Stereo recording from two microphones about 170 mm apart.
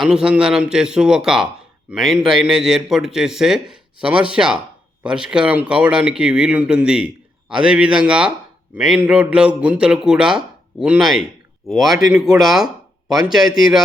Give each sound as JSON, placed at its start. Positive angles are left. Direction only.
{"t": 0.0, "sound": "a man's voice", "side_deg": -5}